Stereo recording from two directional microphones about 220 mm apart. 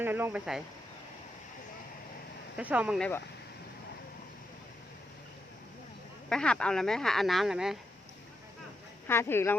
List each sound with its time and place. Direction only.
0.0 s speech: 10° right (ahead or behind)
2.6 s speech: 5° right (ahead or behind)
6.2 s speech: 5° left (ahead or behind)
9.0 s speech: 10° left (ahead or behind)